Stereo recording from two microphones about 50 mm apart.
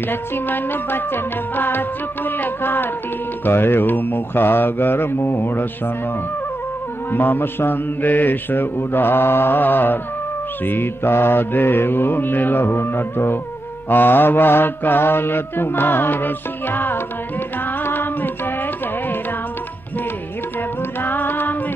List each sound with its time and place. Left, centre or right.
0.1 s mantra: left
7.1 s mantra: left
17.8 s music: left
21.0 s music: left